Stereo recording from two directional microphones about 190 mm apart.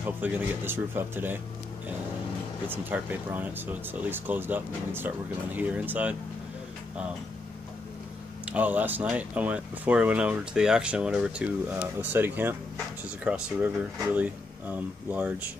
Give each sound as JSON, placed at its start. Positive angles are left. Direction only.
{"t": 0.0, "sound": "speech", "side_deg": -10}
{"t": 2.7, "sound": "speech", "side_deg": -10}
{"t": 8.5, "sound": "speech", "side_deg": -10}